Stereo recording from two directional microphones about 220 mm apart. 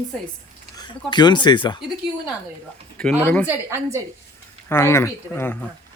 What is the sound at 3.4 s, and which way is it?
Speech, 10° right (ahead or behind).